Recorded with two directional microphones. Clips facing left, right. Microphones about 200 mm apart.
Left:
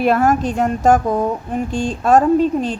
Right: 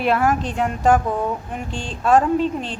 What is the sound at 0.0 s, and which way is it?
Speech, 45° left (ahead or behind).